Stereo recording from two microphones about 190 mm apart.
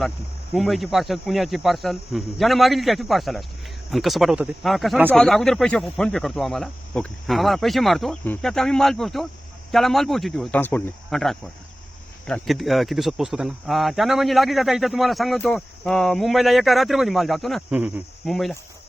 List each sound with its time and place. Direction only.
0.5 s speech: centre (ahead or behind)